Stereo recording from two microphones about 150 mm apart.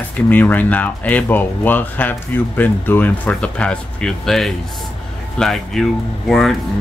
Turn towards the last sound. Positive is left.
turn(degrees=0)  # may be behind; listen again after turning